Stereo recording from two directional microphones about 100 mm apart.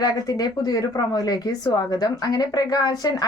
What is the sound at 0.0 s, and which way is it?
Speech, 40° left (ahead or behind).